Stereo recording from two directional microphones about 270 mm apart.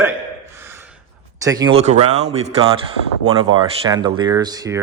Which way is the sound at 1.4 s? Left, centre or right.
Centre.